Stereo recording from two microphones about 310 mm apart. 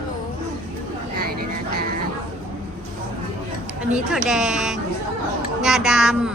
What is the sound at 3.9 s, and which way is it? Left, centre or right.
A woman's voice, centre.